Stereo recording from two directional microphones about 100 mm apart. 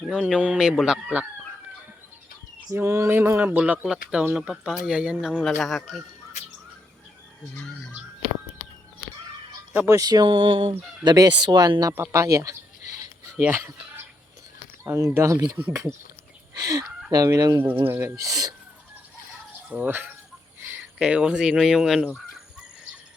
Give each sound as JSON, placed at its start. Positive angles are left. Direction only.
{"t": 0.1, "sound": "speech", "side_deg": -5}
{"t": 2.6, "sound": "speech", "side_deg": -25}
{"t": 5.4, "sound": "speech", "side_deg": 0}
{"t": 7.5, "sound": "speech", "side_deg": 5}
{"t": 9.7, "sound": "speech", "side_deg": -30}
{"t": 11.0, "sound": "speech", "side_deg": -45}
{"t": 17.8, "sound": "speech", "side_deg": -20}
{"t": 18.2, "sound": "speech", "side_deg": -35}
{"t": 19.7, "sound": "speech", "side_deg": -20}